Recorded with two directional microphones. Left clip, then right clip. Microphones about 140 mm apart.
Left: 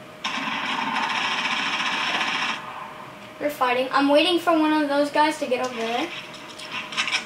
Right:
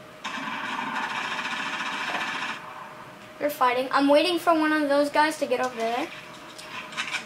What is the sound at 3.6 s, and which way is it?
A woman's voice, 40° right (ahead or behind).